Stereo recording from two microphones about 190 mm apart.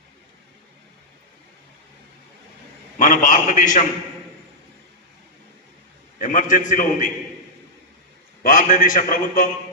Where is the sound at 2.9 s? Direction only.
40° left (ahead or behind).